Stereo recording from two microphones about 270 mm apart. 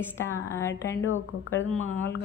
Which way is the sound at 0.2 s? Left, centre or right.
Centre.